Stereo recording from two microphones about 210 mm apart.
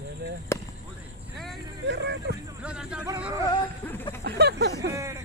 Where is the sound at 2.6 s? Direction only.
5° right (ahead or behind).